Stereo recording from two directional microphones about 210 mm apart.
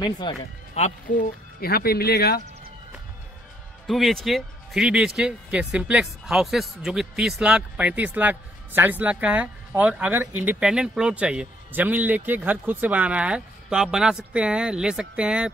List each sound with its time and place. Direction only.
0.0 s speech: 20° left (ahead or behind)
0.7 s speech: 35° left (ahead or behind)
3.8 s speech: centre (ahead or behind)